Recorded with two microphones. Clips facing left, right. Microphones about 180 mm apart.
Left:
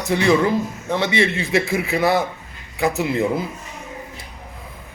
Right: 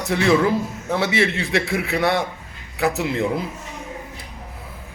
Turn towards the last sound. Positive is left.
turn(degrees=0)  # may be behind; listen again after turning